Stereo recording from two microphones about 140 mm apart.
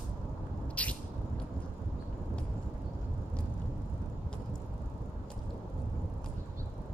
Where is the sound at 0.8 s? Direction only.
10° left (ahead or behind).